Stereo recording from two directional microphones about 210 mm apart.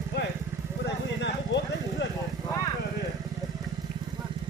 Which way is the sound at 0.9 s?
55° left (ahead or behind).